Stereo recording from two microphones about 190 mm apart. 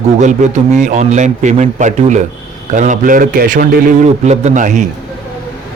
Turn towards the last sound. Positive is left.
turn(degrees=-40)  # may be behind; listen again after turning